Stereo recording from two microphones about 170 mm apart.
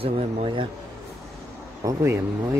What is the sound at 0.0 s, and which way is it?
Speech, 35° right (ahead or behind).